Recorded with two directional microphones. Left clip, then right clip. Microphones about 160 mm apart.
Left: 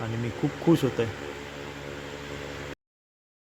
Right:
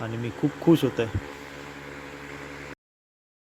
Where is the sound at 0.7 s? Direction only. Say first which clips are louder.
Right 2 dB; 25° right (ahead or behind).